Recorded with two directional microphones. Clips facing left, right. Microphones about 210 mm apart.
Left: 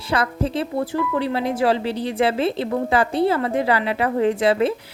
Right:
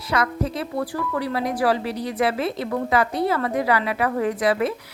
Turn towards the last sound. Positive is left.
turn(degrees=25)  # may be behind; listen again after turning